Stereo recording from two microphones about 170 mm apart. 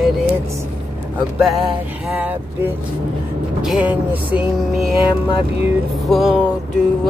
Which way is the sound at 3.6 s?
5° right (ahead or behind).